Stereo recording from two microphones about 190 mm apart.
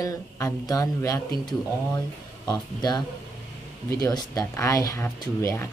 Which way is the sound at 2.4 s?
20° left (ahead or behind).